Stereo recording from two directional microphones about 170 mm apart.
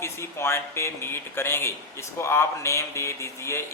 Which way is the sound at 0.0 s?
15° left (ahead or behind).